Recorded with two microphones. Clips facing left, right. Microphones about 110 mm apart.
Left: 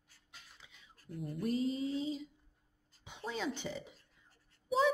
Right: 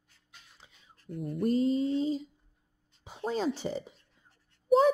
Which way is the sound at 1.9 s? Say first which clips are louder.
Right 8 dB; 35° right (ahead or behind).